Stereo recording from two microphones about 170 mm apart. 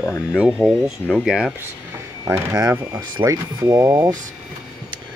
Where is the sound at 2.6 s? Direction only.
20° right (ahead or behind).